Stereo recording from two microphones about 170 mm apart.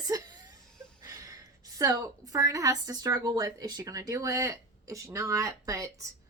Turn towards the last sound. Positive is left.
turn(degrees=-20)  # may be behind; listen again after turning